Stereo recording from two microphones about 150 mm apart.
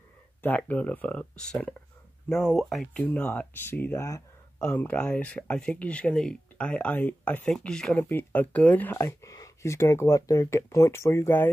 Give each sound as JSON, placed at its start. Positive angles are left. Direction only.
{"t": 0.4, "sound": "speech", "side_deg": 10}